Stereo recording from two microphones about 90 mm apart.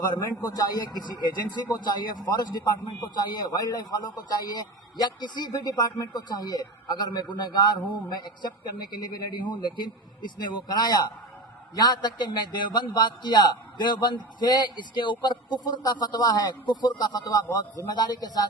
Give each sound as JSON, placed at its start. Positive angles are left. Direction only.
{"t": 0.1, "sound": "a man's voice", "side_deg": 45}